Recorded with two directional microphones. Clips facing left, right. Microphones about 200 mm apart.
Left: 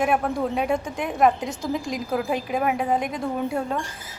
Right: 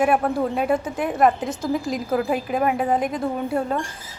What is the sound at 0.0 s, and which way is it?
A woman's voice, 5° right (ahead or behind).